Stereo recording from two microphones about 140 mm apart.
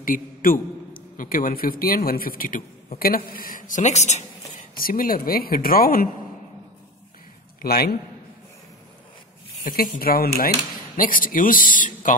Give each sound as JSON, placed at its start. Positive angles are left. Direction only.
{"t": 0.0, "sound": "a man's voice", "side_deg": 90}
{"t": 4.7, "sound": "a woman's voice", "side_deg": 90}
{"t": 7.6, "sound": "a woman's voice", "side_deg": 90}
{"t": 9.7, "sound": "a woman's voice", "side_deg": 90}